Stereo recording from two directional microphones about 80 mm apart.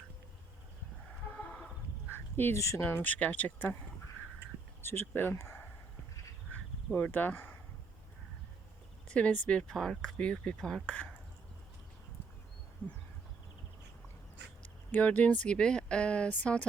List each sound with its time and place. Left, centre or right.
2.0 s a sound: left
2.8 s speech: left
4.8 s speech: left
9.0 s speech: centre
14.9 s speech: centre